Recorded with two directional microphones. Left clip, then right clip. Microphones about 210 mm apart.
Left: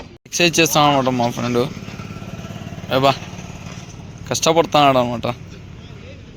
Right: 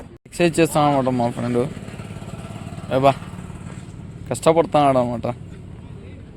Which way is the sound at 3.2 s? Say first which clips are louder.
Left 4 dB; 40° left (ahead or behind).